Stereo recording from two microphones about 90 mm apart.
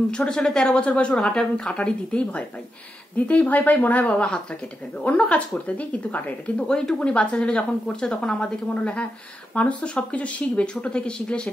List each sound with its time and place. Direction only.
0.1 s speech: 10° left (ahead or behind)